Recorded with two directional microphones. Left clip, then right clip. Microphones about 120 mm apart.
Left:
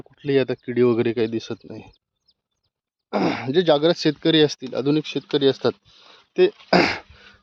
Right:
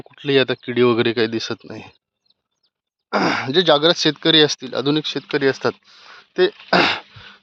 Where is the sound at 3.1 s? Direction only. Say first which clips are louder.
Right 3 dB; 30° left (ahead or behind).